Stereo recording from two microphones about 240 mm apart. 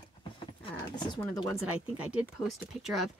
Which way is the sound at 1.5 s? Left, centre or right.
Centre.